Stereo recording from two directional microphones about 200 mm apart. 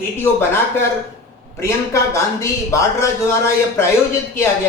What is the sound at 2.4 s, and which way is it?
A man's voice, 15° left (ahead or behind).